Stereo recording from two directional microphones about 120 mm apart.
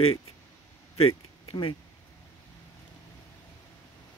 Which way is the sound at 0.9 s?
50° left (ahead or behind).